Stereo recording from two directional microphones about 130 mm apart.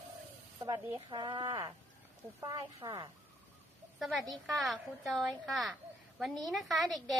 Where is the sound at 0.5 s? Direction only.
30° right (ahead or behind).